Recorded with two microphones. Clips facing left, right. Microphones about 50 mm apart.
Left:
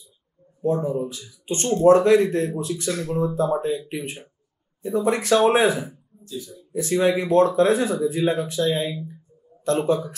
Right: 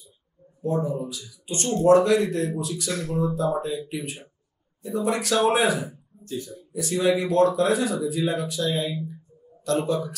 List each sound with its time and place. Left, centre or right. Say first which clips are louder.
0.6 s speech: left 3 dB; left
6.2 s speech: right 2 dB; right
6.7 s speech: left 2 dB; left